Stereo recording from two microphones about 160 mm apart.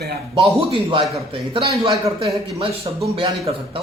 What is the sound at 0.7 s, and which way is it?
Speech, 35° right (ahead or behind).